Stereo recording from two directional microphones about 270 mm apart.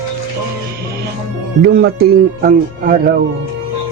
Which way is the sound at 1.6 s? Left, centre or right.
Right.